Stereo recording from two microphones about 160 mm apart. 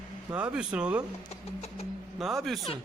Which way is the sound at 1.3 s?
40° left (ahead or behind).